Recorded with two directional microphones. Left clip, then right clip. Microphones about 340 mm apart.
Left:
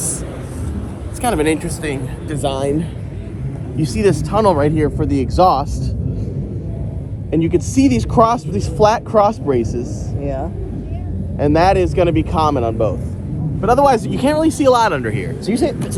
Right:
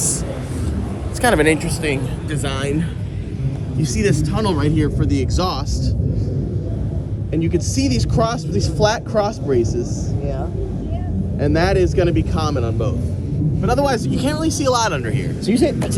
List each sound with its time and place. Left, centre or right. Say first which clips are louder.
1.2 s speech: right 2 dB; centre
4.3 s speech: left 7 dB; centre
7.3 s speech: left 5 dB; centre
11.3 s speech: left 4 dB; centre
15.4 s speech: right 1 dB; centre